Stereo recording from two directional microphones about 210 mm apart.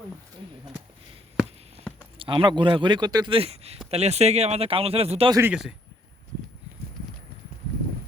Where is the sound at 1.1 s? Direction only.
30° right (ahead or behind).